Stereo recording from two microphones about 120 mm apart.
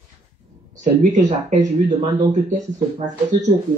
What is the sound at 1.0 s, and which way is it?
Speech, 90° right.